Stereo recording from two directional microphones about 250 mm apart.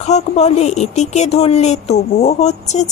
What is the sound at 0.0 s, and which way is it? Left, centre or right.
A woman's voice, left.